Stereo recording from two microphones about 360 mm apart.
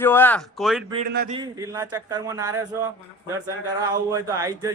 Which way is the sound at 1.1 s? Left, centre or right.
Right.